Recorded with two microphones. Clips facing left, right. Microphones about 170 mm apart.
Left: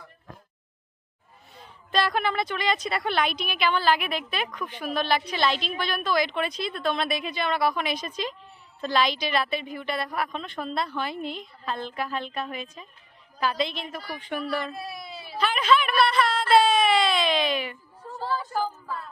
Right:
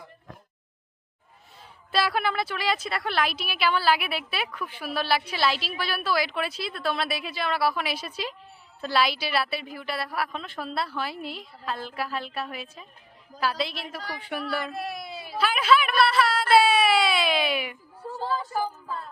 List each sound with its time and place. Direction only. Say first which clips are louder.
1.9 s a woman's voice: left 1 dB; 5° right (ahead or behind)
15.0 s baby cry: right 2 dB; 45° right (ahead or behind)
15.4 s speech: even; 5° right (ahead or behind)
18.0 s a sound: right 1 dB; 25° right (ahead or behind)